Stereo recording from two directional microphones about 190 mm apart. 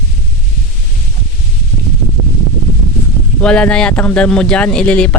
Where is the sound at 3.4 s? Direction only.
5° left (ahead or behind).